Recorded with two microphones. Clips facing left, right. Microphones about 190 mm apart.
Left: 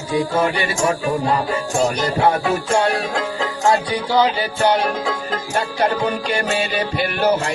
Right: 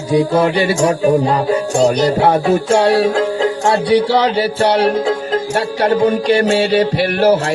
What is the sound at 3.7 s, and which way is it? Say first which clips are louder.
Speech: right 5 dB; 75° right (ahead or behind).